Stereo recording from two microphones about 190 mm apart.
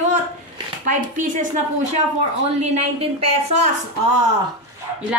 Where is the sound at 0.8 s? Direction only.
45° right (ahead or behind).